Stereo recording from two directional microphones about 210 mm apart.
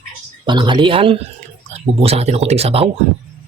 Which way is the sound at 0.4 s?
20° right (ahead or behind).